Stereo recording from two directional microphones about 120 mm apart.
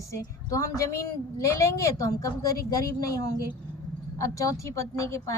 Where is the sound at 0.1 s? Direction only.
30° left (ahead or behind).